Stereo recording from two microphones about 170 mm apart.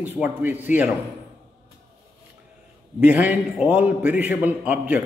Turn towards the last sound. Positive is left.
turn(degrees=-10)  # may be behind; listen again after turning